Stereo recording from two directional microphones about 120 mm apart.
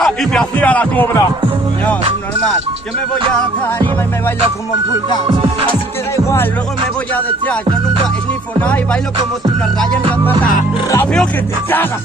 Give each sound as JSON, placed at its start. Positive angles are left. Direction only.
{"t": 0.0, "sound": "speech", "side_deg": 5}
{"t": 5.3, "sound": "speech", "side_deg": -45}